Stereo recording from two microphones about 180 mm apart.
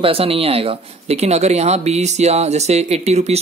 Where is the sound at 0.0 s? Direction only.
30° right (ahead or behind).